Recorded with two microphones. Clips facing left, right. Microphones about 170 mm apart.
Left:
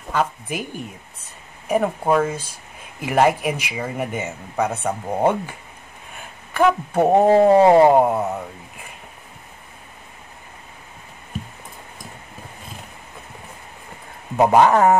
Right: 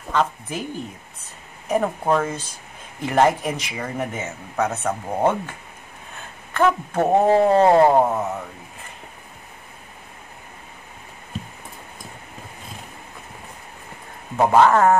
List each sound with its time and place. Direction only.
0.1 s speech: 10° left (ahead or behind)
1.7 s speech: 10° left (ahead or behind)
14.3 s speech: 15° left (ahead or behind)